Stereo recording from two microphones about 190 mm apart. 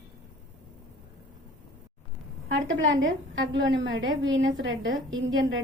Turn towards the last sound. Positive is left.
turn(degrees=-85)